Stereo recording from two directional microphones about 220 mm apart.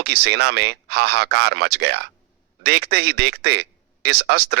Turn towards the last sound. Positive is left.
turn(degrees=-50)  # may be behind; listen again after turning